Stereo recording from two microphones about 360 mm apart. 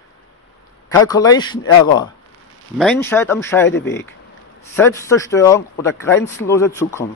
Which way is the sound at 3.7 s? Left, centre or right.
Left.